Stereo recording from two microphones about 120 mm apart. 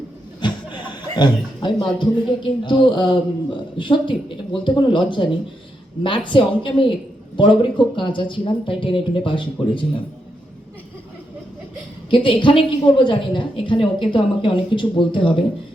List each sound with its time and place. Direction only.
0.4 s chuckle: 40° left (ahead or behind)
2.0 s speech: 40° left (ahead or behind)
12.1 s speech: 45° left (ahead or behind)